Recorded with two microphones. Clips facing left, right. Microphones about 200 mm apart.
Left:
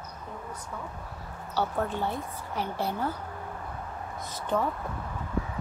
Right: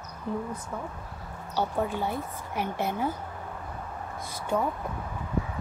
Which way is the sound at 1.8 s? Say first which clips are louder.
Right 1 dB; 10° right (ahead or behind).